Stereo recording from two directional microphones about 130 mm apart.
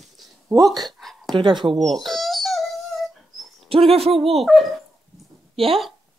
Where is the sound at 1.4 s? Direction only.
40° right (ahead or behind).